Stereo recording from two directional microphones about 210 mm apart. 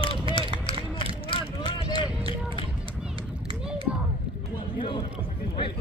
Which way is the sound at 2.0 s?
25° left (ahead or behind).